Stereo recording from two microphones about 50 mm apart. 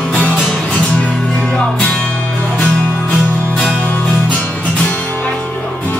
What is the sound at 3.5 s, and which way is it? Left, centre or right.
Music, centre.